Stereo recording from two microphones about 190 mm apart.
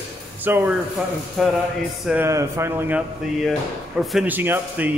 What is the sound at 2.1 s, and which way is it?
Speech, 15° right (ahead or behind).